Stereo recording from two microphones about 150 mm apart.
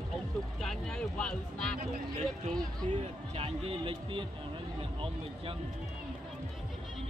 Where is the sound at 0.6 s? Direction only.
5° left (ahead or behind).